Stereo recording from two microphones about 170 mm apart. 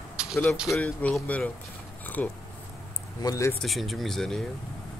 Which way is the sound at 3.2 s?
20° left (ahead or behind).